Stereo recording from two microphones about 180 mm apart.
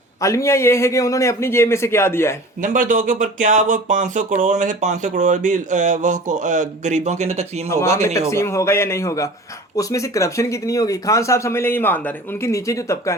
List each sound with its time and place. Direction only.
0.2 s speech: 15° left (ahead or behind)
2.6 s speech: 45° right (ahead or behind)
8.3 s speech: 15° left (ahead or behind)